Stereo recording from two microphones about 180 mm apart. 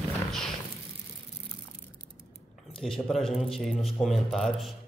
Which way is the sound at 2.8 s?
Centre (ahead or behind).